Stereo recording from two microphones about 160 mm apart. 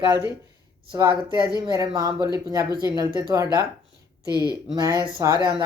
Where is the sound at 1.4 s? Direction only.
25° right (ahead or behind).